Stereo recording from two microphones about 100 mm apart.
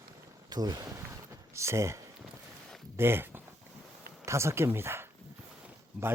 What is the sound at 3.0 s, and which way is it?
Speech, 20° right (ahead or behind).